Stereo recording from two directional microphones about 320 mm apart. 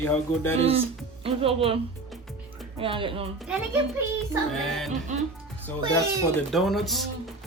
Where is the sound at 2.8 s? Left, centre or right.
Centre.